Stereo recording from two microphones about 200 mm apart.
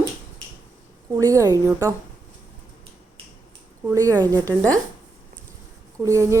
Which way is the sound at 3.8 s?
15° right (ahead or behind).